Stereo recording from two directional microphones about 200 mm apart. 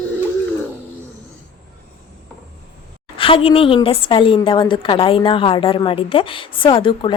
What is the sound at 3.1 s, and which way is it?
A woman's voice, 25° left (ahead or behind).